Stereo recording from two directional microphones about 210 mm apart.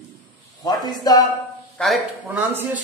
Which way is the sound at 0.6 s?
20° left (ahead or behind).